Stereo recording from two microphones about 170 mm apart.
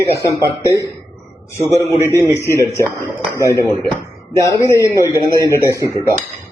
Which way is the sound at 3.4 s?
20° right (ahead or behind).